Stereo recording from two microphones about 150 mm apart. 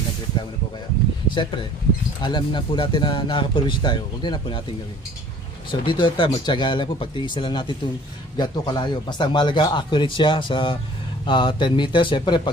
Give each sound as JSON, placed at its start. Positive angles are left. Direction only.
{"t": 1.4, "sound": "speech", "side_deg": 35}
{"t": 5.7, "sound": "speech", "side_deg": 30}